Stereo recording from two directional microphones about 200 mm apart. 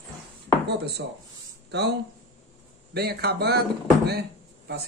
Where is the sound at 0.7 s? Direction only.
55° right (ahead or behind).